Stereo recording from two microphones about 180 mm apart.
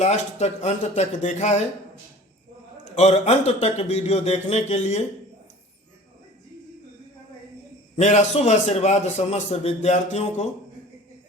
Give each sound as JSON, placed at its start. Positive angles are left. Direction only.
{"t": 0.0, "sound": "a man's voice", "side_deg": 40}
{"t": 2.9, "sound": "a man's voice", "side_deg": 35}
{"t": 7.9, "sound": "a man's voice", "side_deg": 40}